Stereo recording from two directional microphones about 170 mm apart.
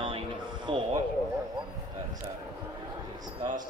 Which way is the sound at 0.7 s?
30° right (ahead or behind).